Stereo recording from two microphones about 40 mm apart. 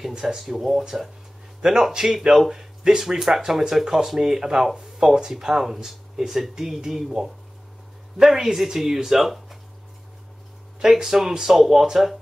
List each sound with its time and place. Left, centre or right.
0.1 s speech: centre
0.4 s speech: centre
10.8 s speech: centre